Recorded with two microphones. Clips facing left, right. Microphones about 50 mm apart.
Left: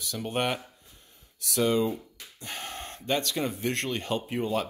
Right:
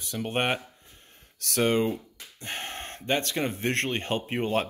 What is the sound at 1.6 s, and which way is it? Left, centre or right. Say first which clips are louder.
Speech: right 1 dB; right.